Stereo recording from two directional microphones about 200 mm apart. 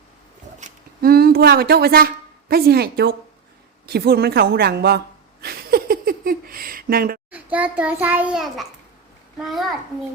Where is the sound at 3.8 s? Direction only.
50° right (ahead or behind).